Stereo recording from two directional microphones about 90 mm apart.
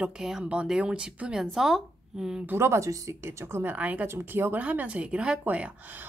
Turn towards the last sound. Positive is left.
turn(degrees=-15)  # may be behind; listen again after turning